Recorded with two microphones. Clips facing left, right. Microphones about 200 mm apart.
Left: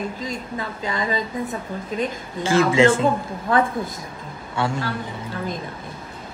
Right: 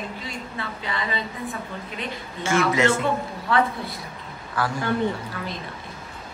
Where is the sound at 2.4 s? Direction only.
30° left (ahead or behind).